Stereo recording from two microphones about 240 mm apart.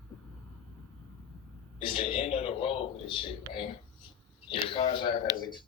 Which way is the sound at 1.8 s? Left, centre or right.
Left.